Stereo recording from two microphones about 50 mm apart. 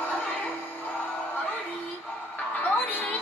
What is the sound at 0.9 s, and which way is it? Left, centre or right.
Music, left.